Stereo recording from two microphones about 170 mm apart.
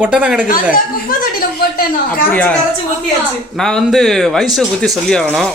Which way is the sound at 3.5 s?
5° left (ahead or behind).